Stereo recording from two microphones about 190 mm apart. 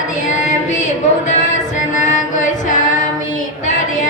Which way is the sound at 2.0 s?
40° left (ahead or behind).